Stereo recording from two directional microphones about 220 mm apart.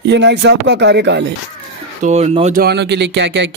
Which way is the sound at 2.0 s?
30° right (ahead or behind).